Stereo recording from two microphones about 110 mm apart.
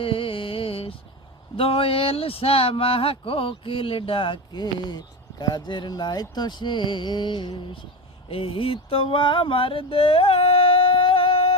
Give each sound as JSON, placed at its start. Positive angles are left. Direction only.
{"t": 0.0, "sound": "music", "side_deg": 55}
{"t": 1.5, "sound": "speech", "side_deg": 60}
{"t": 8.3, "sound": "a sound", "side_deg": 55}